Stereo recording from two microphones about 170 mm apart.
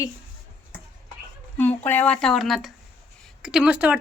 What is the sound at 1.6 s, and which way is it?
A woman's voice, 10° left (ahead or behind).